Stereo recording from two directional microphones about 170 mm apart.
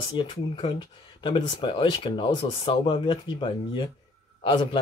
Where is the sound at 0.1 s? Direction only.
30° left (ahead or behind).